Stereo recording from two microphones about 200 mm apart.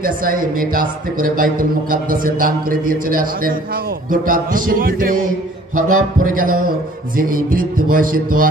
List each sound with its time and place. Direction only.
0.0 s a man's voice: 45° right (ahead or behind)